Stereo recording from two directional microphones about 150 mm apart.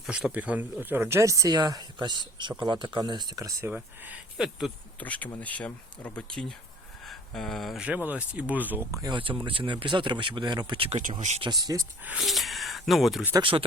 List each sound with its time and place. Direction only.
0.0 s speech: 5° right (ahead or behind); by 3.7 s 25° right (ahead or behind)
3.7 s speech: 10° right (ahead or behind)
4.9 s speech: 10° left (ahead or behind); by 11.0 s 40° right (ahead or behind)
11.2 s speech: 50° right (ahead or behind)
11.4 s speech: 25° right (ahead or behind)
12.0 s speech: 5° right (ahead or behind)
13.4 s speech: 35° right (ahead or behind)